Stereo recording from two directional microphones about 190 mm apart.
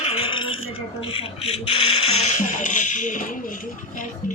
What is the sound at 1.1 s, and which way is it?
Speech, 30° left (ahead or behind).